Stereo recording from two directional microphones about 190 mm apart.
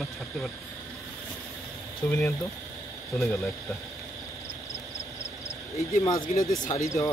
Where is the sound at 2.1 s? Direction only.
15° left (ahead or behind).